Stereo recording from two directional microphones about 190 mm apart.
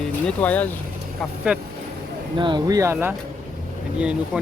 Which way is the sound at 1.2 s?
5° right (ahead or behind).